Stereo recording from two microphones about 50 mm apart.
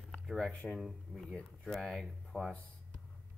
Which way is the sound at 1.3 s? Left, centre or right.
Centre.